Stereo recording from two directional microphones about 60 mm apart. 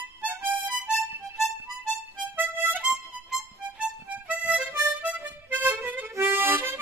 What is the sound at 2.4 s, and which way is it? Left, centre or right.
Harmonica, right.